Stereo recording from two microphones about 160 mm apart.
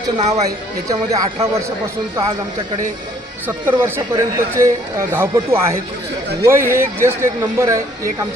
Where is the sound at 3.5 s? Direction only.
15° right (ahead or behind).